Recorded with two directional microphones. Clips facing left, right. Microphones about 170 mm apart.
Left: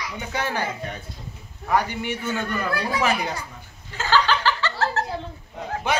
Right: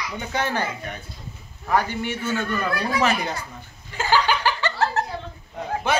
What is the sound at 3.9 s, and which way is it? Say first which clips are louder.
Laughter: even; 15° right (ahead or behind).